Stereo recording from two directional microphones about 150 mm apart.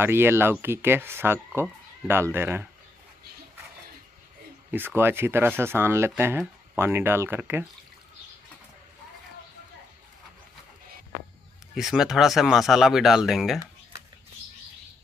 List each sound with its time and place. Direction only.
0.0 s speech: 15° right (ahead or behind)
4.6 s speech: 15° right (ahead or behind)
11.7 s speech: 5° right (ahead or behind)